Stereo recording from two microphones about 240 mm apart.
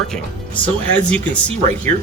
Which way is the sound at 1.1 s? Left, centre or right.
Centre.